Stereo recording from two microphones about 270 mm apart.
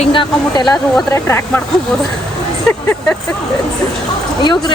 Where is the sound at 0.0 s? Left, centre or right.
Centre.